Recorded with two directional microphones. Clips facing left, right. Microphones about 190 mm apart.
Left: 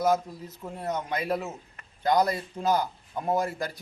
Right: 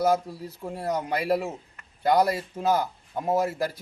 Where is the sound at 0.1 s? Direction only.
5° right (ahead or behind).